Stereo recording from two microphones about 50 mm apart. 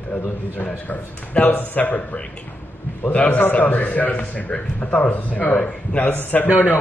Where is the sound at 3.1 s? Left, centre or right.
Left.